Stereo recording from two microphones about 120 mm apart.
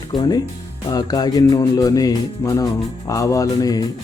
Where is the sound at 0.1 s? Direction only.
35° left (ahead or behind).